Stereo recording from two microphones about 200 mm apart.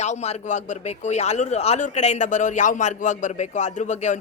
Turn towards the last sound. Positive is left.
turn(degrees=35)  # may be behind; listen again after turning